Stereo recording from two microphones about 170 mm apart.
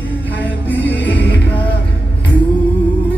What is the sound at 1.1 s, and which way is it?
Music, 90° left.